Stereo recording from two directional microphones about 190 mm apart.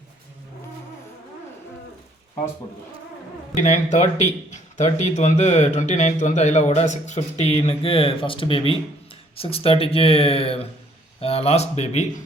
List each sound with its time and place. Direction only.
3.5 s speech: 40° left (ahead or behind)